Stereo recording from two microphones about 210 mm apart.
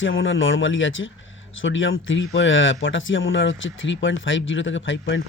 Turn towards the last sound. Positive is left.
turn(degrees=65)  # may be behind; listen again after turning